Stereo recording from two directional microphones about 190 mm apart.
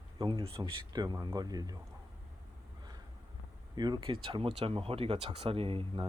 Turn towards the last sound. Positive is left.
turn(degrees=-30)  # may be behind; listen again after turning